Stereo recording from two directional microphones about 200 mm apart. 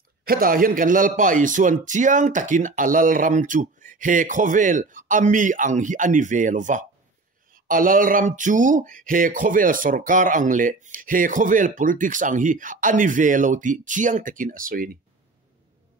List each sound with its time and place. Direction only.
0.2 s speech: 45° right (ahead or behind)